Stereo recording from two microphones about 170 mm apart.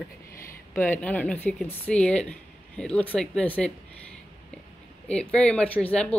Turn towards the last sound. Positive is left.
turn(degrees=5)  # may be behind; listen again after turning